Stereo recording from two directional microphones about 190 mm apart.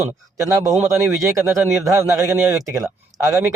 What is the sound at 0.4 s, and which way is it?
Speech, 15° right (ahead or behind).